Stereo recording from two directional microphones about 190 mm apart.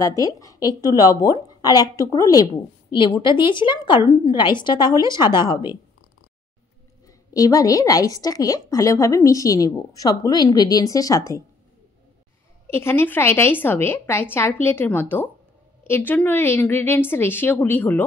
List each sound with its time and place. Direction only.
0.0 s a woman's voice: 15° left (ahead or behind)
7.1 s a woman's voice: 20° left (ahead or behind)
12.6 s a woman's voice: 10° left (ahead or behind)